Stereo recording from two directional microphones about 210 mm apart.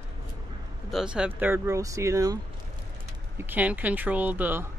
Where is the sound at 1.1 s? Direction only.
5° right (ahead or behind).